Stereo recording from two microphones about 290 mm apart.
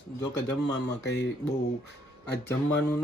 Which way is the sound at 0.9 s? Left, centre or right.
Left.